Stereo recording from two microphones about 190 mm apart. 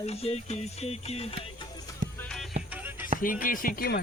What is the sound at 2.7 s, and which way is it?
Music, 10° right (ahead or behind).